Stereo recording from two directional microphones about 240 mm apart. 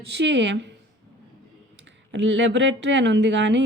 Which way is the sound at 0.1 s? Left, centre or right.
Right.